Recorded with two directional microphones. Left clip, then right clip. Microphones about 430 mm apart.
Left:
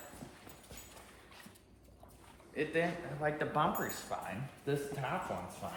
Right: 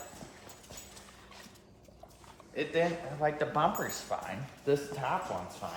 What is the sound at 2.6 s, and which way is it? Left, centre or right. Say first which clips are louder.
Speech: right 4 dB; right.